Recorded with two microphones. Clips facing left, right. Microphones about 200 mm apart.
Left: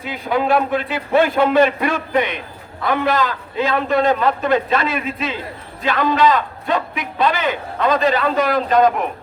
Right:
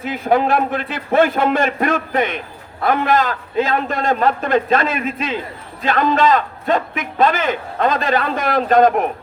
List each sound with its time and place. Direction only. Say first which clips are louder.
0.0 s a man's voice: right 4 dB; 50° right (ahead or behind)